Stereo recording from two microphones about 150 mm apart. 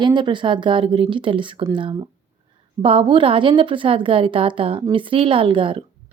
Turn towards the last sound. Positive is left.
turn(degrees=-35)  # may be behind; listen again after turning